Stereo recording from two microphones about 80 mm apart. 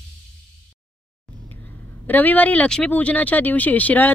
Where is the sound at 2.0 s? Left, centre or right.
Left.